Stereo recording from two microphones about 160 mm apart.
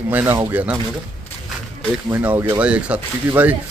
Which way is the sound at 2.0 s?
15° right (ahead or behind).